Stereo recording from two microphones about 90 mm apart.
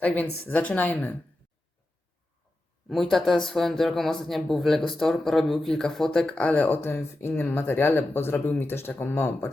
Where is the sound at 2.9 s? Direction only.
Centre (ahead or behind).